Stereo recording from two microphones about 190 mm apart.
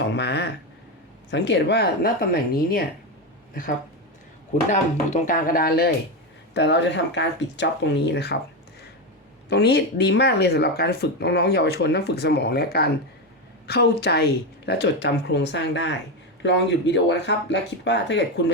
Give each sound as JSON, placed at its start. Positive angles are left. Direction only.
{"t": 0.0, "sound": "speech", "side_deg": 65}
{"t": 4.7, "sound": "speech", "side_deg": 40}
{"t": 6.5, "sound": "speech", "side_deg": 65}
{"t": 9.5, "sound": "speech", "side_deg": 60}